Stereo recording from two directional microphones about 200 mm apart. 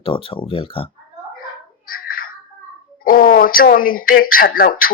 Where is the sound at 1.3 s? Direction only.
45° left (ahead or behind).